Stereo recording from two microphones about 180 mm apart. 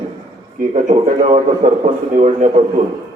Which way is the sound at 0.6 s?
40° right (ahead or behind).